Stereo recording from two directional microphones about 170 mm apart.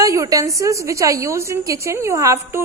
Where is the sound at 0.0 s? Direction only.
20° right (ahead or behind).